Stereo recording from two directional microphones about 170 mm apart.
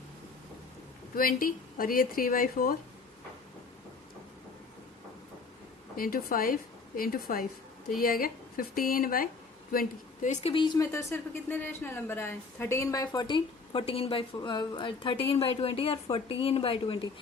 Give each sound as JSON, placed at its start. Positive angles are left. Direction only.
{"t": 1.1, "sound": "speech", "side_deg": 55}
{"t": 6.0, "sound": "speech", "side_deg": 60}
{"t": 9.7, "sound": "a woman's voice", "side_deg": 50}
{"t": 10.5, "sound": "a woman's voice", "side_deg": 25}
{"t": 10.9, "sound": "a woman's voice", "side_deg": 15}